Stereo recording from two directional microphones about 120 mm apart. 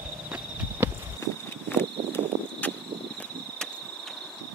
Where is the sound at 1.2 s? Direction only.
20° left (ahead or behind).